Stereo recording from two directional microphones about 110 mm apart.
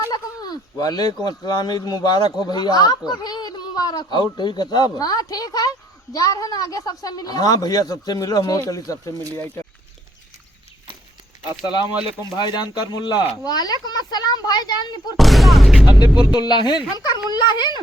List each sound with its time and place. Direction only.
0.1 s a sound: 35° left (ahead or behind)
1.5 s speech: 35° left (ahead or behind)
9.1 s speech: 35° right (ahead or behind)
11.6 s speech: 40° left (ahead or behind)
15.2 s speech: centre (ahead or behind)
16.3 s speech: 40° left (ahead or behind)